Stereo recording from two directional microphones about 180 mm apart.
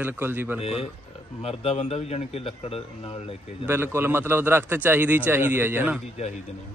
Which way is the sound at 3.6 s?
10° right (ahead or behind).